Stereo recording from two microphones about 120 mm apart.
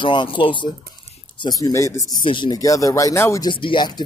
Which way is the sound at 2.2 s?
40° left (ahead or behind).